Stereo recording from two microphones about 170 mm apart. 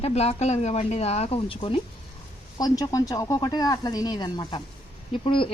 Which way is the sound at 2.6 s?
20° left (ahead or behind).